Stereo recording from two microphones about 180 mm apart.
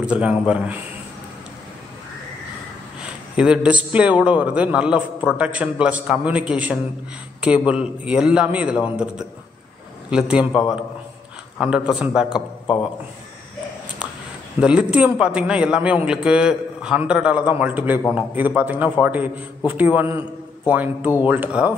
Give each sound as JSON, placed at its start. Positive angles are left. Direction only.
{"t": 0.0, "sound": "a man's voice", "side_deg": -5}
{"t": 3.0, "sound": "a man's voice", "side_deg": -5}
{"t": 11.6, "sound": "a man's voice", "side_deg": -5}
{"t": 14.6, "sound": "a man's voice", "side_deg": -5}